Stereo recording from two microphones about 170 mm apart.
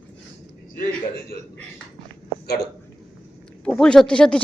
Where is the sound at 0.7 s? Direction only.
55° left (ahead or behind).